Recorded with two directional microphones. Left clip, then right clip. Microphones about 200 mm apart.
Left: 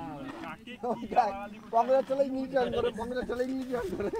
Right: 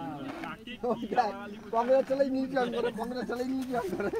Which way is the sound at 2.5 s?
10° left (ahead or behind).